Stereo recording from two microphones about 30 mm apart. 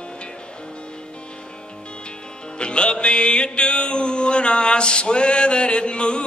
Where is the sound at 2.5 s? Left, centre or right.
Left.